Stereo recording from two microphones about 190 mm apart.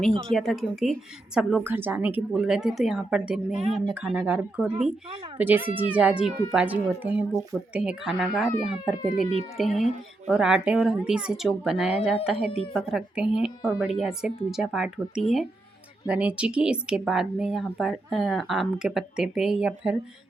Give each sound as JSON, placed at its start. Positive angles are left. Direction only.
{"t": 0.3, "sound": "speech", "side_deg": 0}